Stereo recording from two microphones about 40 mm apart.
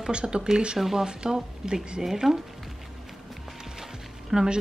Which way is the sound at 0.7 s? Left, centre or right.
Centre.